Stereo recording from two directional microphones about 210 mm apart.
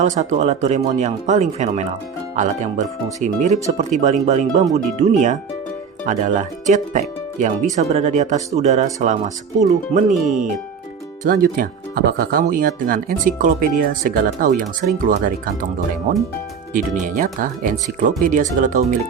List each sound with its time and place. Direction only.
0.0 s speech: 35° right (ahead or behind)
11.2 s speech: 45° right (ahead or behind)
16.7 s speech: 40° right (ahead or behind)